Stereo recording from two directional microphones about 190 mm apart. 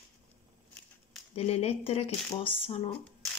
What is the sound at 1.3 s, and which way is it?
Speech, 30° left (ahead or behind).